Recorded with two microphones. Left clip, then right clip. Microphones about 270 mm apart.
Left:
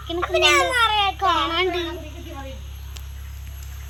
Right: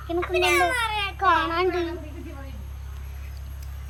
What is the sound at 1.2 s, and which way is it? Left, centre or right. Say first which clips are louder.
Speech: left 1 dB; centre.